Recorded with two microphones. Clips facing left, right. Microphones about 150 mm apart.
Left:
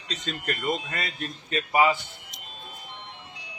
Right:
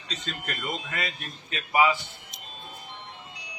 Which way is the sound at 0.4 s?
40° left (ahead or behind).